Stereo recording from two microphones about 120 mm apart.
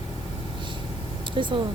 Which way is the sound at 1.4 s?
40° right (ahead or behind).